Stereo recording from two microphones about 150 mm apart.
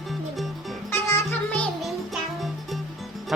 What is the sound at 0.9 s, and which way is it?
Music, 15° left (ahead or behind).